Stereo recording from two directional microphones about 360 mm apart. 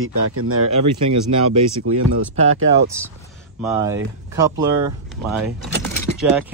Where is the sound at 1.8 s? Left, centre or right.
Right.